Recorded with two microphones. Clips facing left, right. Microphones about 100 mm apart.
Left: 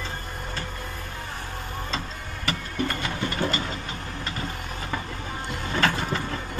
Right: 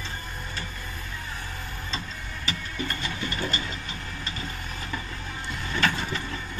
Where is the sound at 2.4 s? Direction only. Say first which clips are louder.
Left 5 dB; 60° left (ahead or behind).